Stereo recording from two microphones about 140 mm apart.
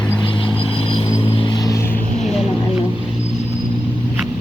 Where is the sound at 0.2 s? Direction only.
35° left (ahead or behind); by 2.0 s 15° left (ahead or behind).